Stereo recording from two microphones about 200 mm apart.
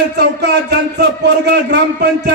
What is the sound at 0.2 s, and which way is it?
A man's voice, 55° right (ahead or behind).